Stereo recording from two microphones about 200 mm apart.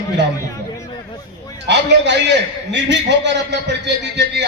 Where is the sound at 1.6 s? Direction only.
60° right (ahead or behind).